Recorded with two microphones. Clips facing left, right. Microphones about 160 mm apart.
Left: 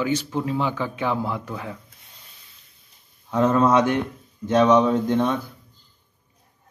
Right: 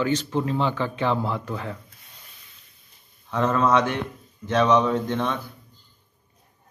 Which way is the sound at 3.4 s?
20° left (ahead or behind).